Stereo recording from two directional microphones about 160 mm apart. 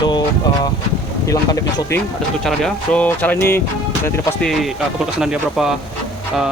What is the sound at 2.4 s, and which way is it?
Speech, 5° left (ahead or behind).